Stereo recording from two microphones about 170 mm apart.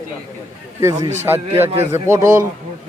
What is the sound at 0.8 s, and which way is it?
Speech, 15° right (ahead or behind).